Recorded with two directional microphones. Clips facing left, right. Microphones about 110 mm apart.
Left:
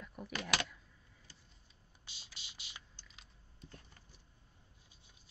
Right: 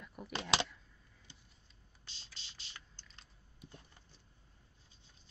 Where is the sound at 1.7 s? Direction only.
10° left (ahead or behind).